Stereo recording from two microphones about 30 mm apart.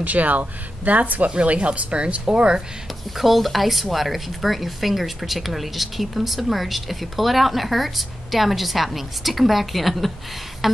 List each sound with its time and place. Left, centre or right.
0.0 s speech: right
1.3 s speech: right
3.2 s speech: centre